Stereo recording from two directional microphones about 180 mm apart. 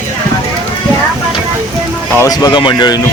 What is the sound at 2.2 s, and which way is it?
Speech, 20° left (ahead or behind).